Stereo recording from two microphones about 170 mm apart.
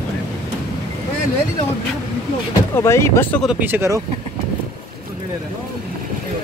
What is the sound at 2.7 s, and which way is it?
Speech, 15° left (ahead or behind).